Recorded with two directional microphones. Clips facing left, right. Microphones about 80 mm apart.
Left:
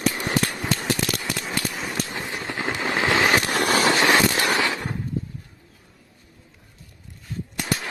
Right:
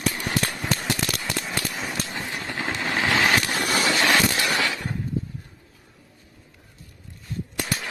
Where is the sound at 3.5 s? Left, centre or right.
Left.